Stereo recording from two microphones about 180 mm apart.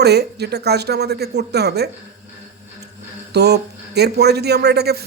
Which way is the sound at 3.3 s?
65° right (ahead or behind).